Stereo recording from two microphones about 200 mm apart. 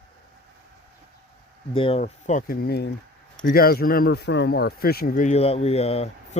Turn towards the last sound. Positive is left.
turn(degrees=30)  # may be behind; listen again after turning